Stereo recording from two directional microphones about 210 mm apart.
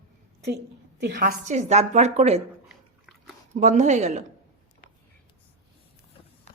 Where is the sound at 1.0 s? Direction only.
50° right (ahead or behind); by 2.4 s 30° right (ahead or behind).